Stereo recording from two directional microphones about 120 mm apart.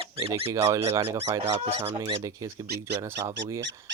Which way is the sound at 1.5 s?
60° right (ahead or behind).